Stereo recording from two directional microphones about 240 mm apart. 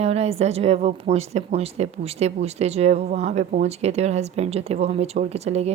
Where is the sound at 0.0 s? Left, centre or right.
Right.